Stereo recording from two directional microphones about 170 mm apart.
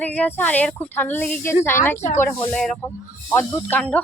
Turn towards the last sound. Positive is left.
turn(degrees=10)  # may be behind; listen again after turning